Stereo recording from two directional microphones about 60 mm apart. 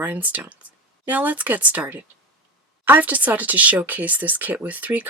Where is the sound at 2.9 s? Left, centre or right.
Right.